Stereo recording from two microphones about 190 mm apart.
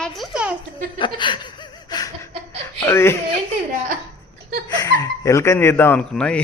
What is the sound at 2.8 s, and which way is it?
Speech, 15° left (ahead or behind).